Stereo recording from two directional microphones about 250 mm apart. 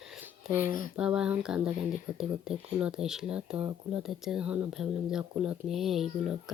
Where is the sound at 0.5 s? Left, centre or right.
Left.